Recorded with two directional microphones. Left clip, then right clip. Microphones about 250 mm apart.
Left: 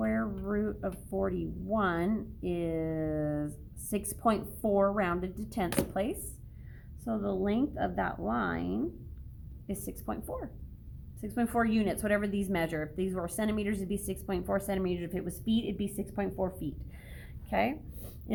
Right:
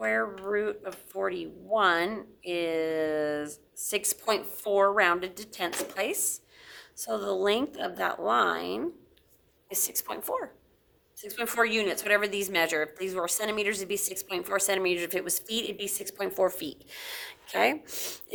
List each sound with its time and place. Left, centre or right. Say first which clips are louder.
0.0 s speech: right 6 dB; centre
6.7 s a woman's voice: right 5 dB; right